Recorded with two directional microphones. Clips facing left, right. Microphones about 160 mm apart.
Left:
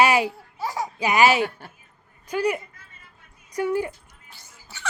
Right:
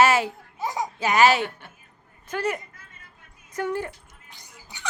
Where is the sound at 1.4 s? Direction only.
40° left (ahead or behind).